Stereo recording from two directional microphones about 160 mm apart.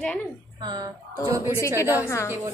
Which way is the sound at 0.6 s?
25° right (ahead or behind).